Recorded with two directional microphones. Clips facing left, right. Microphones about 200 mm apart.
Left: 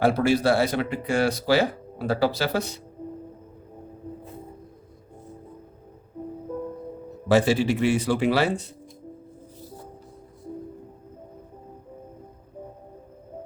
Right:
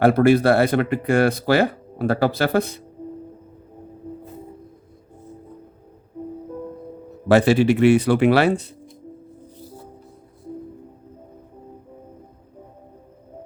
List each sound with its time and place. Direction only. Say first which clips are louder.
0.0 s speech: right 6 dB; 55° right (ahead or behind)
7.3 s speech: right 5 dB; 65° right (ahead or behind)